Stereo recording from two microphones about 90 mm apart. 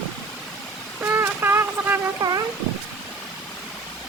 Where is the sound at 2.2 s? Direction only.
50° right (ahead or behind).